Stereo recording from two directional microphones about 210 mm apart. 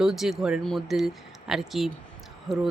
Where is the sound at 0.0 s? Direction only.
Centre (ahead or behind).